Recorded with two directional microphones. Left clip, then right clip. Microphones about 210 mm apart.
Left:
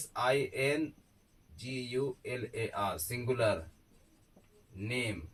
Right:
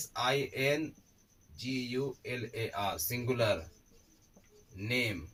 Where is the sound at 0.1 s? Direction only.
10° left (ahead or behind).